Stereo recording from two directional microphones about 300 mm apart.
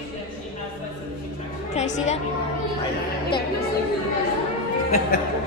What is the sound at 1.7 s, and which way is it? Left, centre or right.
Speech, left.